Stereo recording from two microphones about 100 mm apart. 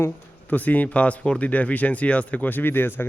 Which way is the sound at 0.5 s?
15° left (ahead or behind).